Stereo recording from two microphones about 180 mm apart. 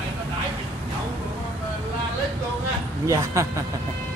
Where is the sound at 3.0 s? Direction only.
15° right (ahead or behind).